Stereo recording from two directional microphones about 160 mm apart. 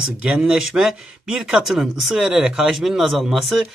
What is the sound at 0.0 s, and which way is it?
Speech, 5° right (ahead or behind).